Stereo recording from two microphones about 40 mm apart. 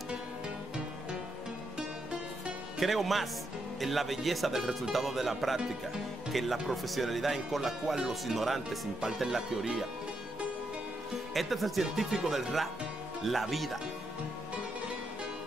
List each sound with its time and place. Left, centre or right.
2.8 s speech: centre
11.3 s speech: centre
13.2 s speech: centre